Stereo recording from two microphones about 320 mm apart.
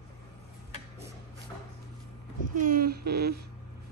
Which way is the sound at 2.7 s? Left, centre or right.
Right.